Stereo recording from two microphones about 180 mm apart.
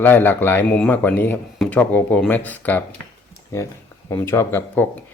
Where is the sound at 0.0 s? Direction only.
10° left (ahead or behind).